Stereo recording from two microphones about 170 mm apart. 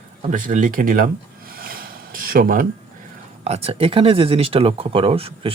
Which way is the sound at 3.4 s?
35° right (ahead or behind).